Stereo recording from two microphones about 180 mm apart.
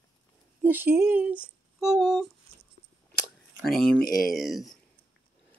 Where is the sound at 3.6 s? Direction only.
Centre (ahead or behind).